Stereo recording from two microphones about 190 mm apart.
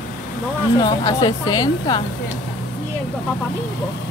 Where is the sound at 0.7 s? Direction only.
20° left (ahead or behind).